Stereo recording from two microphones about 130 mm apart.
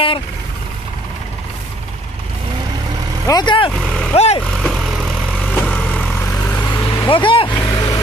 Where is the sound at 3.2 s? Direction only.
35° left (ahead or behind).